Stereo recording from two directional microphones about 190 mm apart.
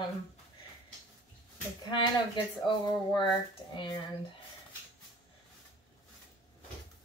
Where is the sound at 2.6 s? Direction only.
25° left (ahead or behind).